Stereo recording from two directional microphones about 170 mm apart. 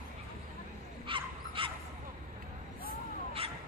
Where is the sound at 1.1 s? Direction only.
30° right (ahead or behind).